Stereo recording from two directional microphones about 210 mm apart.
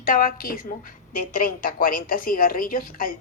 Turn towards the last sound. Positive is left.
turn(degrees=40)  # may be behind; listen again after turning